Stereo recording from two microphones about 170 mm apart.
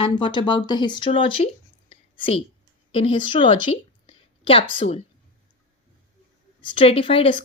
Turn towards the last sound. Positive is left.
turn(degrees=30)  # may be behind; listen again after turning